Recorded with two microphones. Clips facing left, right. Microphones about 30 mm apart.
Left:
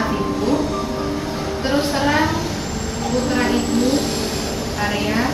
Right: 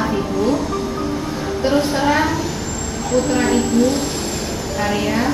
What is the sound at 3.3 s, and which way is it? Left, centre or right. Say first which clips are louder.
Vehicle: right 1 dB; centre.